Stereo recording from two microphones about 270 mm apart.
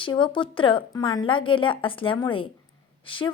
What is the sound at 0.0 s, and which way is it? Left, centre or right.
A woman's voice, centre.